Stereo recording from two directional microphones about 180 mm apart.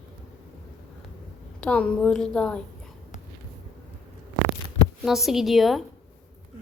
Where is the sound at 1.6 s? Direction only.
5° left (ahead or behind).